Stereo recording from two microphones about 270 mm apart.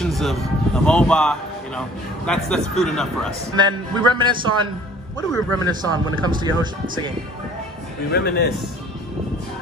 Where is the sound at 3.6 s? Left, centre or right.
Centre.